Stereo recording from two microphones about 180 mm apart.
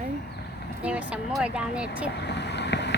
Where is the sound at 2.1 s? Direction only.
70° left (ahead or behind).